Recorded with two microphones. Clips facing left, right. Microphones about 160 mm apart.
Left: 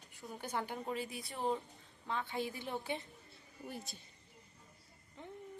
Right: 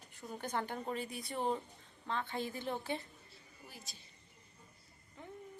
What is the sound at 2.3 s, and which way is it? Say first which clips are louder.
Speech: right 1 dB; 10° left (ahead or behind).